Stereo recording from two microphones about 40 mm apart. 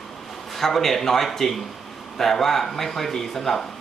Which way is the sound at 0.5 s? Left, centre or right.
Centre.